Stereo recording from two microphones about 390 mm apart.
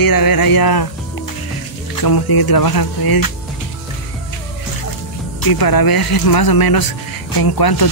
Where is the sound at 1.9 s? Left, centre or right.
Left.